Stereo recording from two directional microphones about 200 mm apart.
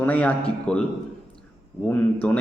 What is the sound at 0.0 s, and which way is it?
Speech, 5° left (ahead or behind).